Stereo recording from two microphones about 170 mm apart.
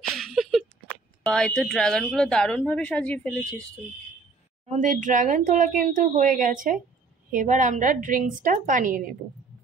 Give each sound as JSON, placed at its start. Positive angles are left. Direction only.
{"t": 0.2, "sound": "a sound", "side_deg": 0}
{"t": 1.2, "sound": "speech", "side_deg": 5}
{"t": 4.6, "sound": "speech", "side_deg": -50}